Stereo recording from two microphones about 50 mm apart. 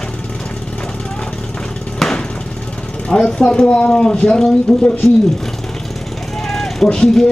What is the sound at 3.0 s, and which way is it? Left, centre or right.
Speech, centre.